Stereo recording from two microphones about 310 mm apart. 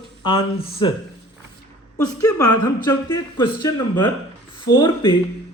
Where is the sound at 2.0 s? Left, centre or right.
Centre.